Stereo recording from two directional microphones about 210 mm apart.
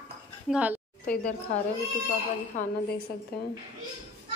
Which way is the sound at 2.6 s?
35° left (ahead or behind).